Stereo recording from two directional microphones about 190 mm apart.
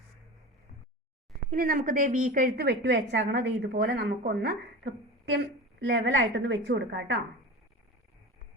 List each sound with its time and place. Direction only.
1.5 s a woman's voice: 50° right (ahead or behind)
5.8 s a woman's voice: 70° right (ahead or behind)